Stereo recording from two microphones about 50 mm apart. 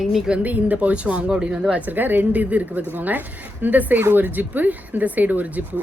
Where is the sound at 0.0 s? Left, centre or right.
Centre.